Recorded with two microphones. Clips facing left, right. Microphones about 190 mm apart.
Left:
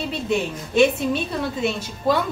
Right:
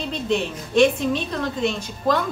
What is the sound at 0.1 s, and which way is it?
A woman's voice, 5° left (ahead or behind).